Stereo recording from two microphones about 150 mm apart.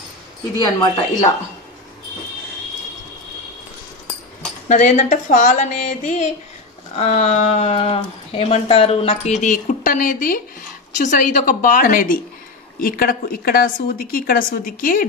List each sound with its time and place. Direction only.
0.6 s speech: 30° left (ahead or behind)
4.6 s a woman's voice: 50° left (ahead or behind); by 15.0 s 70° left (ahead or behind)